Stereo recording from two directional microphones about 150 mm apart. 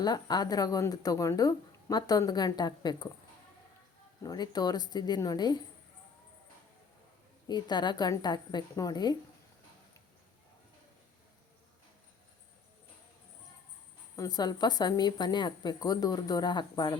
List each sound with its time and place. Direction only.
0.0 s speech: 25° left (ahead or behind)
4.2 s speech: 25° left (ahead or behind)
7.4 s speech: 30° left (ahead or behind)
14.2 s speech: 25° left (ahead or behind)